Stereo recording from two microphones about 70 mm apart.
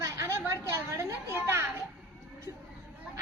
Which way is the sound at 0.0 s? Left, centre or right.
Right.